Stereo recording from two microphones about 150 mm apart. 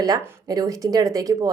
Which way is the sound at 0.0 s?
25° right (ahead or behind).